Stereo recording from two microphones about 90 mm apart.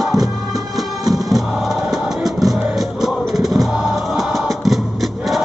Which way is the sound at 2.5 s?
Centre (ahead or behind).